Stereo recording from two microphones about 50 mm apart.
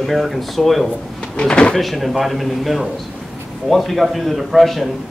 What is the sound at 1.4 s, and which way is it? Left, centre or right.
Speech, centre.